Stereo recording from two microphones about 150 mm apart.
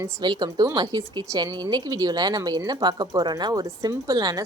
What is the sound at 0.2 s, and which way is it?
Speech, 30° right (ahead or behind).